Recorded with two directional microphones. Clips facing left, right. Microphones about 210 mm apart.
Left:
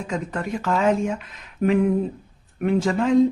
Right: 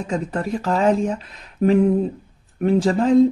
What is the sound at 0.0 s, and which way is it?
Speech, 35° right (ahead or behind).